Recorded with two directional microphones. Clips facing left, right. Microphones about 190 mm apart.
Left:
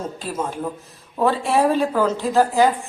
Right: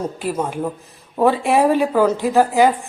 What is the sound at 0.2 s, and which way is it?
A woman's voice, 15° right (ahead or behind).